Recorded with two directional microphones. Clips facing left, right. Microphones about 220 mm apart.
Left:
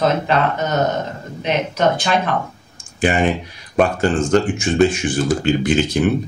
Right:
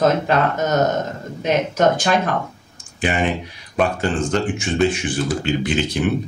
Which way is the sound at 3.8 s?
45° left (ahead or behind).